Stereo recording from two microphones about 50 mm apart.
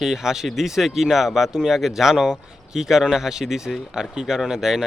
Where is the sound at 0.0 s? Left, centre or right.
Centre.